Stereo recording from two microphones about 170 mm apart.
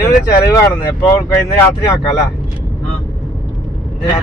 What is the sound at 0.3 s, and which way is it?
Speech, 20° left (ahead or behind).